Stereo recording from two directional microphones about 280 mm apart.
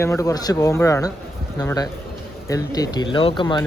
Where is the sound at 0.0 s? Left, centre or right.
Centre.